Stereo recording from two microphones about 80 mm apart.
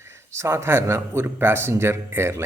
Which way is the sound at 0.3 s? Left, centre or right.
Right.